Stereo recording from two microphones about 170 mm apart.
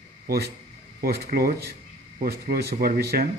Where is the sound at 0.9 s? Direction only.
60° right (ahead or behind).